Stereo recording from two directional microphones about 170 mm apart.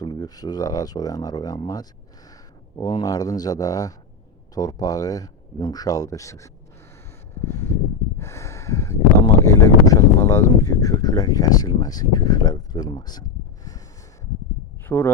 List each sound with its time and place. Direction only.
0.0 s speech: 25° left (ahead or behind)
7.3 s a sound: 15° left (ahead or behind)
8.2 s speech: 15° left (ahead or behind)
14.8 s speech: 10° left (ahead or behind)